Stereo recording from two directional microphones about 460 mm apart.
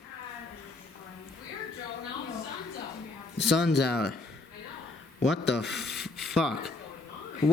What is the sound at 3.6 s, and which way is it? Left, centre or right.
Speech, left.